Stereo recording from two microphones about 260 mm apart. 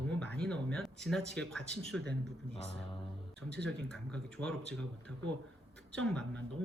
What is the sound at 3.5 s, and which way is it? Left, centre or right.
Speech, centre.